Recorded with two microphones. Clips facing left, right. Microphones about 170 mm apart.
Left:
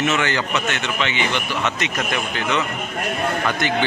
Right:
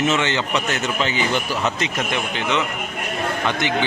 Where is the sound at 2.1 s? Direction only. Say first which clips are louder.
Even; 20° right (ahead or behind).